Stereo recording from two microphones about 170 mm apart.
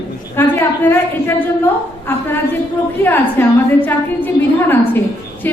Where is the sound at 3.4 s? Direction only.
10° left (ahead or behind).